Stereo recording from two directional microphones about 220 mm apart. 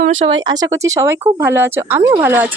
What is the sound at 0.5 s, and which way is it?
A woman's voice, 15° right (ahead or behind).